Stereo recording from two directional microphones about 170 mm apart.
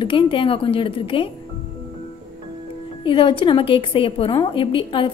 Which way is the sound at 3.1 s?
30° left (ahead or behind).